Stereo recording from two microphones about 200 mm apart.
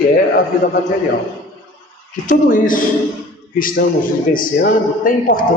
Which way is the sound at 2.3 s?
40° left (ahead or behind).